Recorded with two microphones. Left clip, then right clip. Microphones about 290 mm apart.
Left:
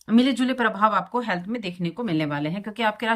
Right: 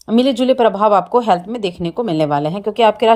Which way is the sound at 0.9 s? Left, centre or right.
Right.